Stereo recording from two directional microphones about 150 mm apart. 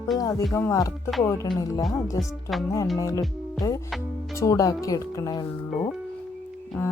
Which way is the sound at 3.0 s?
25° left (ahead or behind).